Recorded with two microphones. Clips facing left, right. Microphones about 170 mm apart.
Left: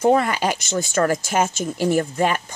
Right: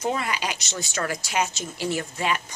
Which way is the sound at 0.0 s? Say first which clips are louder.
Left 9 dB; 50° left (ahead or behind).